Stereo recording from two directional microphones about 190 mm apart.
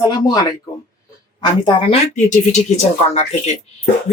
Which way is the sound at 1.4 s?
25° left (ahead or behind).